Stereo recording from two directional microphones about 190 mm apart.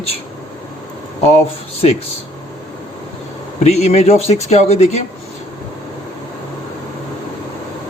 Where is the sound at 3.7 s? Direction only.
35° left (ahead or behind).